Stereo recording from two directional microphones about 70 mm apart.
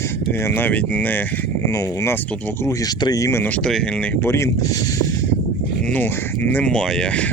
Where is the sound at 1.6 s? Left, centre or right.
Left.